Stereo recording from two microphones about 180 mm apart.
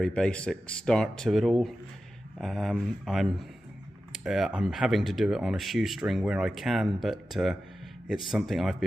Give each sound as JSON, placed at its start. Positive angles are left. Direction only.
{"t": 0.0, "sound": "speech", "side_deg": 5}